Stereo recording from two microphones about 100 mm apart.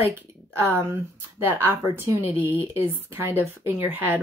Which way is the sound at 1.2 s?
25° right (ahead or behind).